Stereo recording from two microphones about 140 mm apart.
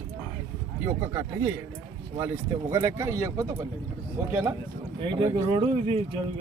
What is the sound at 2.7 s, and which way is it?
A man's voice, 20° right (ahead or behind).